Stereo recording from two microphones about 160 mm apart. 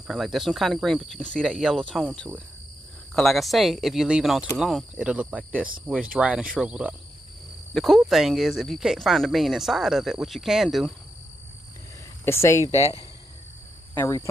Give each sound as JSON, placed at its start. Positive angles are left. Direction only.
{"t": 0.0, "sound": "speech", "side_deg": 0}
{"t": 3.2, "sound": "speech", "side_deg": 0}
{"t": 12.3, "sound": "speech", "side_deg": 15}
{"t": 12.7, "sound": "speech", "side_deg": 40}
{"t": 13.9, "sound": "speech", "side_deg": 20}